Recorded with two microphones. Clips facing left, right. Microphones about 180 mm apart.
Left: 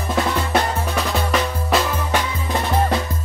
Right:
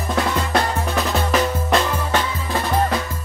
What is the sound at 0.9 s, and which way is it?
Drum, centre (ahead or behind).